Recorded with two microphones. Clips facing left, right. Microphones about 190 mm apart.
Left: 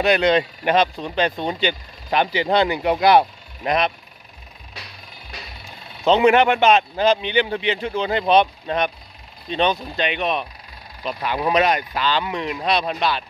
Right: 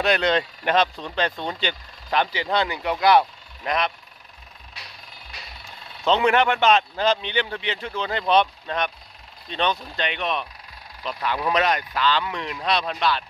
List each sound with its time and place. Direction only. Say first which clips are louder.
0.0 s speech: left 4 dB; 10° left (ahead or behind)
6.0 s speech: left 5 dB; 15° left (ahead or behind)